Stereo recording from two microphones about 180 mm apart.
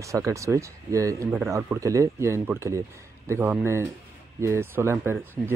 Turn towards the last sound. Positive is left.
turn(degrees=-15)  # may be behind; listen again after turning